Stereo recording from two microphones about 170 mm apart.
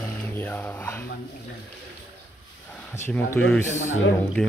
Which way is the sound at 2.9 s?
15° left (ahead or behind).